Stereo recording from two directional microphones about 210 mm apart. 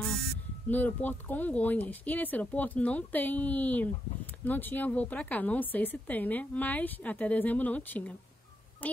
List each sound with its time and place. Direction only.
0.7 s speech: 10° left (ahead or behind)
8.8 s quack: 10° left (ahead or behind)